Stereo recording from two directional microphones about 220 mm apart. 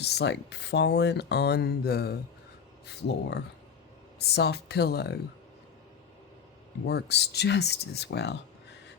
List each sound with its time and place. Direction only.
0.0 s speech: 50° left (ahead or behind)
6.8 s speech: 50° left (ahead or behind)